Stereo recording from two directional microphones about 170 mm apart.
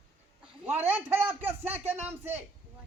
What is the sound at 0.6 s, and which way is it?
A man's voice, 10° right (ahead or behind).